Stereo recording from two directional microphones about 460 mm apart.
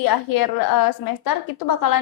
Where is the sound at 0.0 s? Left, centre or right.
Left.